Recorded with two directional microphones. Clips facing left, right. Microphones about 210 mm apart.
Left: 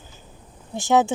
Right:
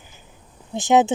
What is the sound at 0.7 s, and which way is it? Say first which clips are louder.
Speech: right 2 dB; 20° right (ahead or behind).